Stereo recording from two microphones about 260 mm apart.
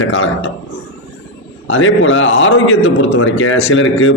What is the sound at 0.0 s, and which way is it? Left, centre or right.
Speech, left.